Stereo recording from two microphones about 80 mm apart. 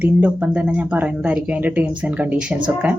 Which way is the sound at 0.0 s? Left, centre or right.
Centre.